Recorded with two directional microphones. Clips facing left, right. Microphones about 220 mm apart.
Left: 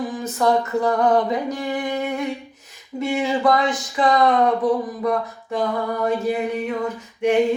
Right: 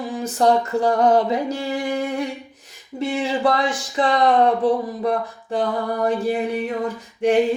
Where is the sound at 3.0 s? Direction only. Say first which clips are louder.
Left 1 dB; 30° right (ahead or behind).